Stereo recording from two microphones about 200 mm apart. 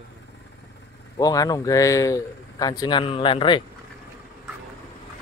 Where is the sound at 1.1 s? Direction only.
20° left (ahead or behind).